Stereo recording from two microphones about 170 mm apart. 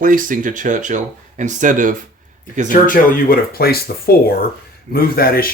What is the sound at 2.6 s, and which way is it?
Speech, 55° left (ahead or behind).